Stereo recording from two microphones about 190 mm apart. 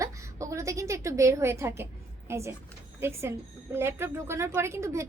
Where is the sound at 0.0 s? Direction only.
15° right (ahead or behind).